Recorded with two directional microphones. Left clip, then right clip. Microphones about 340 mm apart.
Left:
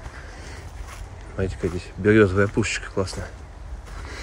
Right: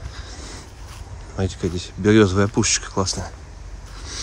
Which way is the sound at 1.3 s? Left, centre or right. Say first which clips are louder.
Right 1 dB; centre.